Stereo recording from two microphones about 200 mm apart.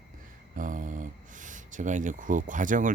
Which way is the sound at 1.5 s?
40° right (ahead or behind).